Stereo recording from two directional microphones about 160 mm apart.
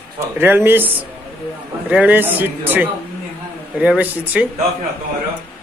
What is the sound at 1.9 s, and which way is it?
A man's voice, 10° right (ahead or behind).